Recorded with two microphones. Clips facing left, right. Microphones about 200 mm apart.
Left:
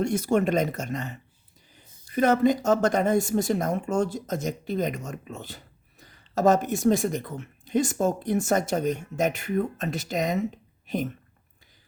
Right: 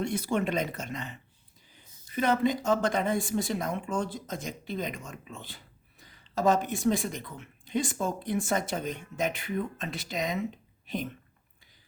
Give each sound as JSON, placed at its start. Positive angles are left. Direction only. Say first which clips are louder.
{"t": 0.0, "sound": "speech", "louder": "left 6 dB", "side_deg": 45}